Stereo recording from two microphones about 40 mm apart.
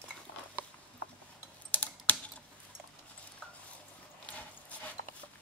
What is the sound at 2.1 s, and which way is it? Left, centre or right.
Typing, left.